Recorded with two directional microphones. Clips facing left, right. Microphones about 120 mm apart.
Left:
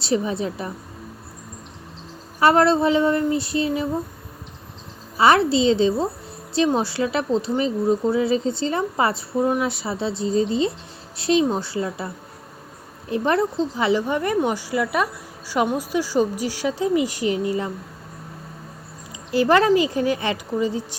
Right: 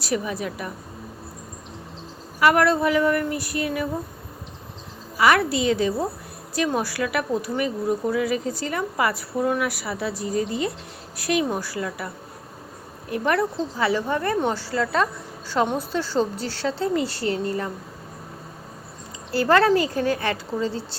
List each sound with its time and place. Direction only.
0.0 s speech: 25° left (ahead or behind)
2.4 s speech: 30° left (ahead or behind)
5.1 s a woman's voice: 30° left (ahead or behind)
19.3 s a woman's voice: 20° left (ahead or behind)